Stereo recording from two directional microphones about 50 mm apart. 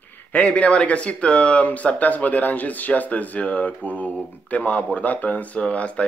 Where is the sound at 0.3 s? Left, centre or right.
Left.